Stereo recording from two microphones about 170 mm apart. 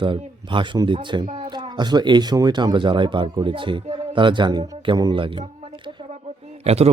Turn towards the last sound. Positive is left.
turn(degrees=-35)  # may be behind; listen again after turning